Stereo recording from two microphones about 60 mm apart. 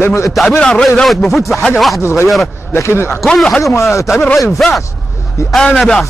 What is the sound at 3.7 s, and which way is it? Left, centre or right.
Speech, left.